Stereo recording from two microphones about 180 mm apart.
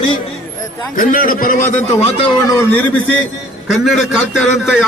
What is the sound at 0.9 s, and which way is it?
A man's voice, 50° left (ahead or behind).